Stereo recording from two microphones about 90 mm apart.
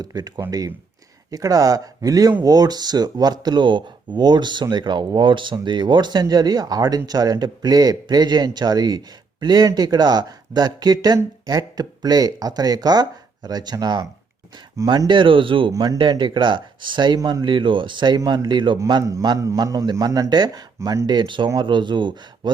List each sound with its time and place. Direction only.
0.0 s speech: 50° right (ahead or behind)
14.8 s speech: 60° right (ahead or behind)
15.7 s speech: 40° right (ahead or behind)
16.0 s speech: 60° right (ahead or behind)
19.2 s speech: 50° right (ahead or behind)
20.7 s speech: 35° right (ahead or behind)
21.2 s speech: 60° right (ahead or behind)